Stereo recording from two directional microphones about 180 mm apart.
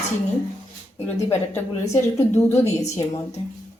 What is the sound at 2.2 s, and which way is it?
Speech, 15° left (ahead or behind).